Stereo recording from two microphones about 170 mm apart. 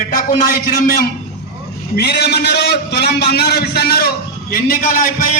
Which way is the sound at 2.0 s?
70° left (ahead or behind).